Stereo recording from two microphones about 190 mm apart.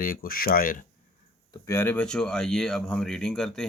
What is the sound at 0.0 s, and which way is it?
Speech, 50° left (ahead or behind).